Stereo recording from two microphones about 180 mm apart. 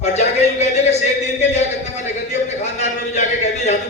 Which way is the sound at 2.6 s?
40° left (ahead or behind).